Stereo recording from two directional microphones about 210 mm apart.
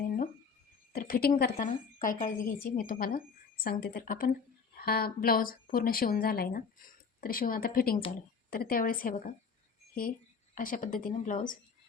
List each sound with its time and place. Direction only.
0.9 s a woman's voice: 45° left (ahead or behind)